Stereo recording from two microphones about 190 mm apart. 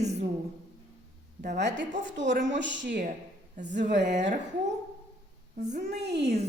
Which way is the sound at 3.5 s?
40° right (ahead or behind).